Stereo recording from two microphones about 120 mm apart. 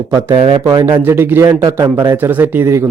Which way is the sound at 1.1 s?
20° right (ahead or behind).